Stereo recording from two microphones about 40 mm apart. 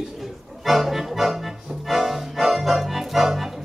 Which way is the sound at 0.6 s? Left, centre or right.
Centre.